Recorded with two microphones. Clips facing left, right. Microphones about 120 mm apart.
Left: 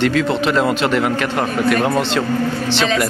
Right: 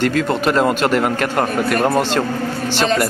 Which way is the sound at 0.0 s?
45° right (ahead or behind).